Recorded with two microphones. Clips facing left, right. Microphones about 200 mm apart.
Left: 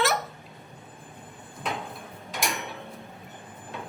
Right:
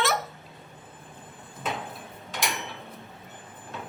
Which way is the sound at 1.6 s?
Centre (ahead or behind).